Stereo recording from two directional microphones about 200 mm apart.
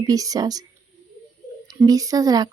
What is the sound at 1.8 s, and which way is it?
Speech, 15° right (ahead or behind).